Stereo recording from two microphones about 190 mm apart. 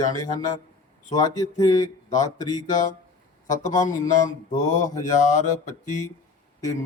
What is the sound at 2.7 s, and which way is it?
Speech, 40° left (ahead or behind).